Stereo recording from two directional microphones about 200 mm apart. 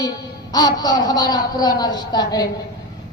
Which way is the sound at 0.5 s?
20° left (ahead or behind).